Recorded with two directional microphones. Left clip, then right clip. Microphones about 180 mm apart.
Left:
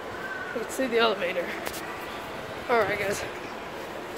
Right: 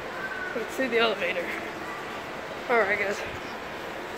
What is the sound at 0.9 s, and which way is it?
Speech, 25° left (ahead or behind).